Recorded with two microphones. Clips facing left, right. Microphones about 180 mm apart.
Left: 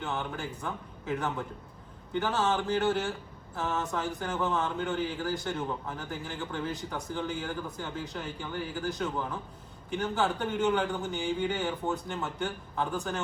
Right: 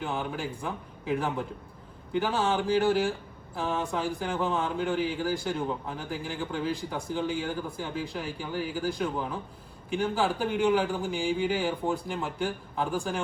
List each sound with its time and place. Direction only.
0.0 s speech: 10° right (ahead or behind)